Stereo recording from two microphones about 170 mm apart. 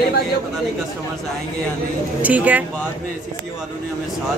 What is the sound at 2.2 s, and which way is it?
Speech, 10° right (ahead or behind).